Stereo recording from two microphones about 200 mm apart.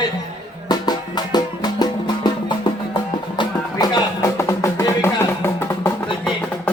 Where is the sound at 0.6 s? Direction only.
20° left (ahead or behind).